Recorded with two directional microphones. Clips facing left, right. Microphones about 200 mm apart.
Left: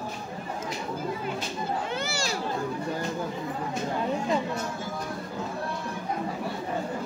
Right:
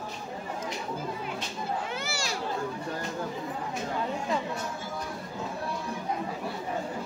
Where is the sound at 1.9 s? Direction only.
Centre (ahead or behind).